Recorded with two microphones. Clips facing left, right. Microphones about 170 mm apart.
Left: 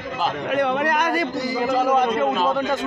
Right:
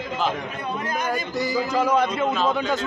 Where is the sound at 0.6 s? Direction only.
70° left (ahead or behind).